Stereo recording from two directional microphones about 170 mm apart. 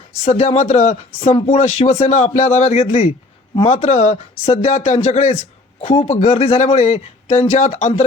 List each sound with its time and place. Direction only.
0.3 s speech: 40° left (ahead or behind)